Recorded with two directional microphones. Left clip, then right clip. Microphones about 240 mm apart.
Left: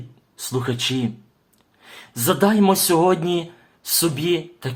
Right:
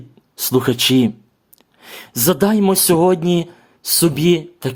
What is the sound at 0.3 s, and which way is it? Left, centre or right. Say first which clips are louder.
Speech: right 8 dB; right.